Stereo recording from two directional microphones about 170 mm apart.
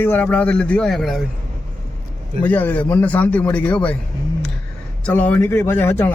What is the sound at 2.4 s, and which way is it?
A man's voice, 10° left (ahead or behind).